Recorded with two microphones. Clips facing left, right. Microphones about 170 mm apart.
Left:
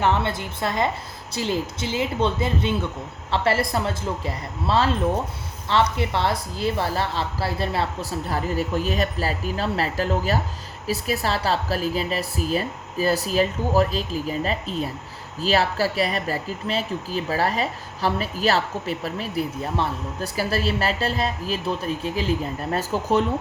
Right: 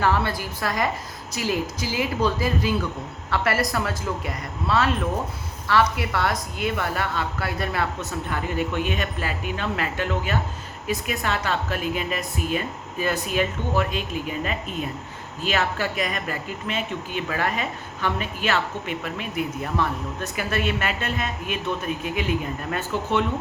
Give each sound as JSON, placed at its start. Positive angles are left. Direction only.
{"t": 0.0, "sound": "speech", "side_deg": 20}